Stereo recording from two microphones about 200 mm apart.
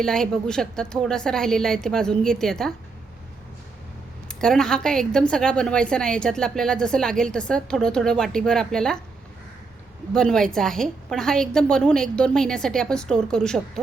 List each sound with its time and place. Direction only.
0.0 s a woman's voice: 5° left (ahead or behind)
4.3 s a woman's voice: 5° left (ahead or behind)
10.2 s a woman's voice: 5° left (ahead or behind)